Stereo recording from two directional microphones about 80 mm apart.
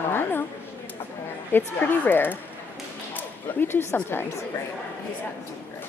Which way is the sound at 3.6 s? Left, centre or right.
Left.